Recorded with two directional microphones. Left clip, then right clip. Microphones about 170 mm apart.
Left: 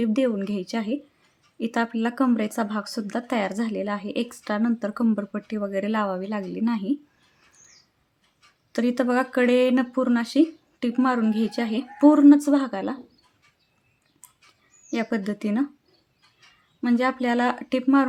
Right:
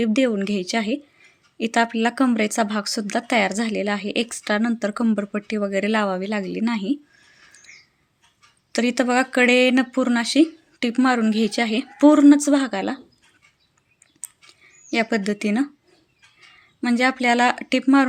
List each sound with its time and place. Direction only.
0.0 s speech: 10° right (ahead or behind)
8.7 s speech: 10° right (ahead or behind)
14.8 s speech: 10° right (ahead or behind)
16.8 s speech: 10° right (ahead or behind)